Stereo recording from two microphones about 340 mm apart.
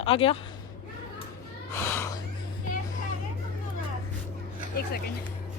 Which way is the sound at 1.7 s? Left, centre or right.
Centre.